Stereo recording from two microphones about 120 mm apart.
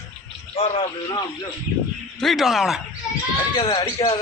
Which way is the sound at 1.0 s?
35° left (ahead or behind).